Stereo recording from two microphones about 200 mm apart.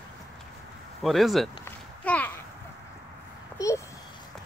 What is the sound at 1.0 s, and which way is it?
Speech, centre (ahead or behind).